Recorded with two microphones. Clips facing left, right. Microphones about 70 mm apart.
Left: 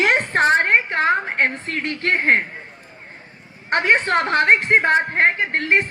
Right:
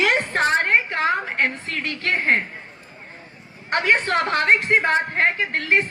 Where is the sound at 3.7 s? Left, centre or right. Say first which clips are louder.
Left 2 dB; left.